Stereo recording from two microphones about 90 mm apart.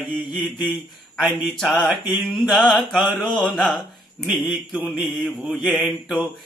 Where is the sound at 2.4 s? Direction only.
10° right (ahead or behind).